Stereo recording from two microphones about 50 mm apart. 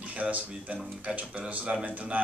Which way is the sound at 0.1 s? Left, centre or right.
Right.